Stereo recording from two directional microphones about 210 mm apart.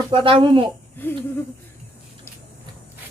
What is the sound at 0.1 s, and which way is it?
Speech, 25° right (ahead or behind).